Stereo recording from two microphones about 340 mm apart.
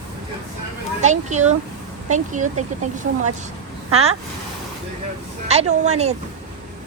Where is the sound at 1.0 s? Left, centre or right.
Right.